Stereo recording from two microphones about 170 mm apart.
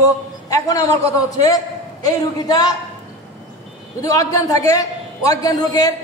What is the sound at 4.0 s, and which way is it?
A man's voice, 20° left (ahead or behind).